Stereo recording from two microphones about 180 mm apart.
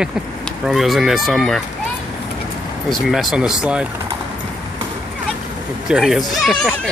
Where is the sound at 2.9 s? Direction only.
Centre (ahead or behind).